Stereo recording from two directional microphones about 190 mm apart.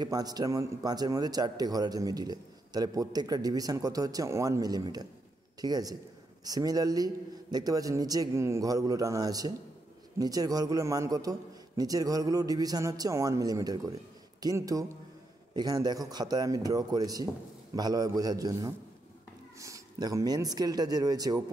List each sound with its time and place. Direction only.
0.0 s a man's voice: 20° right (ahead or behind)